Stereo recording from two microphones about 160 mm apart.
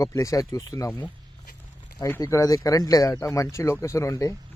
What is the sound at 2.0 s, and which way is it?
Speech, 15° left (ahead or behind).